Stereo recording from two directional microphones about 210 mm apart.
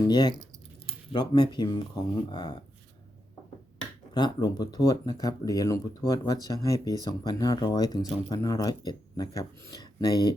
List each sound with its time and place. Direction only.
0.0 s speech: 20° left (ahead or behind)
4.1 s speech: 20° left (ahead or behind)